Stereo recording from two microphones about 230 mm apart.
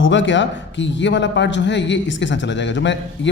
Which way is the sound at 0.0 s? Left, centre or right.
Left.